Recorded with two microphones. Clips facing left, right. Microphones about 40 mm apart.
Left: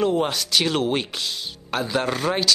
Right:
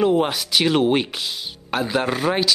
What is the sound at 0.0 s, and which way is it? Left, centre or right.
Speech, centre.